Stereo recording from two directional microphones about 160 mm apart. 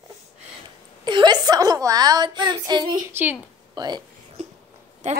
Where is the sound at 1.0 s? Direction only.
30° right (ahead or behind).